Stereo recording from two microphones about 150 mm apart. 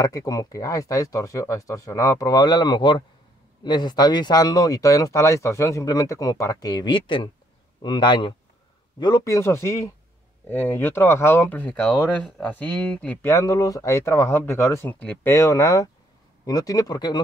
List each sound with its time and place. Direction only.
0.0 s speech: 25° left (ahead or behind)
13.3 s speech: 20° left (ahead or behind)
15.3 s speech: 20° left (ahead or behind)